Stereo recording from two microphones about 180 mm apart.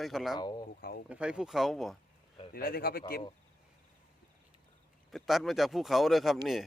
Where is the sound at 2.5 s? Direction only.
55° left (ahead or behind).